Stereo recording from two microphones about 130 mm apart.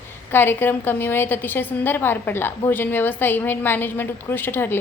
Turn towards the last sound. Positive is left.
turn(degrees=15)  # may be behind; listen again after turning